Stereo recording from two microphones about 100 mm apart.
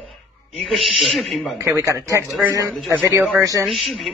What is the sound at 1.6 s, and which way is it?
Speech, 30° right (ahead or behind).